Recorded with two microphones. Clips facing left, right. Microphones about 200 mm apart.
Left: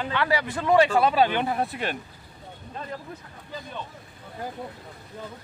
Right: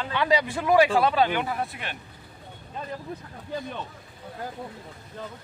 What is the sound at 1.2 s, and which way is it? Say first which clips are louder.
Speech: left 2 dB; 25° left (ahead or behind).